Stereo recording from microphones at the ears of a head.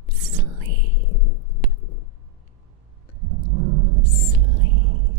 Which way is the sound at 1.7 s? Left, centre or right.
Left.